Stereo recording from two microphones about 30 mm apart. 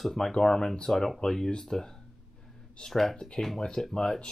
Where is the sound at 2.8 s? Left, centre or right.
Left.